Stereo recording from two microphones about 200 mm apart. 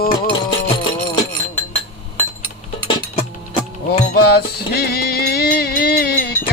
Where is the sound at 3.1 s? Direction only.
25° left (ahead or behind).